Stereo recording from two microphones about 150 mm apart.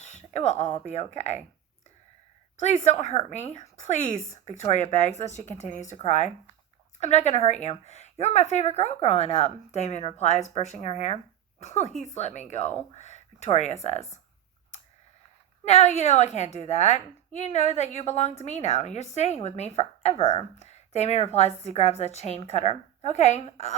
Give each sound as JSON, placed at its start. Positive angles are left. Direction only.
{"t": 0.0, "sound": "a sound", "side_deg": 50}
{"t": 0.9, "sound": "a woman's voice", "side_deg": 45}
{"t": 2.6, "sound": "a woman's voice", "side_deg": 50}
{"t": 10.0, "sound": "speech", "side_deg": 35}
{"t": 10.2, "sound": "a woman's voice", "side_deg": 50}
{"t": 15.6, "sound": "a woman's voice", "side_deg": 45}